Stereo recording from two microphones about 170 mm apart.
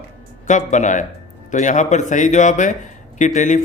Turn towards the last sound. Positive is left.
turn(degrees=45)  # may be behind; listen again after turning